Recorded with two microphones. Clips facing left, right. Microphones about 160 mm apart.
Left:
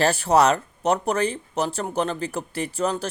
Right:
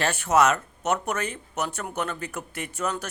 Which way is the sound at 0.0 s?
35° left (ahead or behind).